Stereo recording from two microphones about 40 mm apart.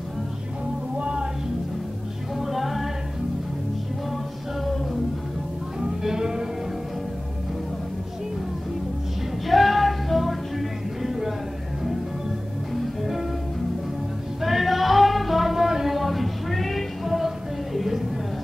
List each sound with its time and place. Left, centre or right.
0.9 s music: right
2.3 s music: centre
5.8 s music: centre
9.5 s music: centre
14.4 s music: centre
15.5 s a sound: centre